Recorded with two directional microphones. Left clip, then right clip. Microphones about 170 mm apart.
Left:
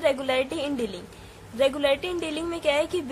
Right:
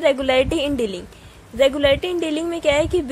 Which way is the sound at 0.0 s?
30° right (ahead or behind).